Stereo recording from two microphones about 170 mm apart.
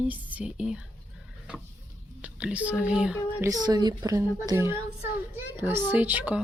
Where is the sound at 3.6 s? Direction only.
25° right (ahead or behind).